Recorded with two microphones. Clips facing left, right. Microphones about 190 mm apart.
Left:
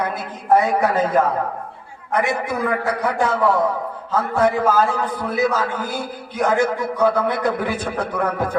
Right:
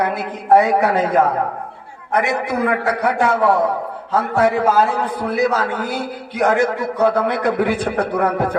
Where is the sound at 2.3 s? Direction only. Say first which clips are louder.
Right 3 dB; 65° right (ahead or behind).